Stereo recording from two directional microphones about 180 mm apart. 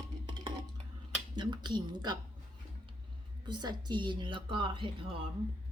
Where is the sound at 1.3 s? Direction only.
25° right (ahead or behind).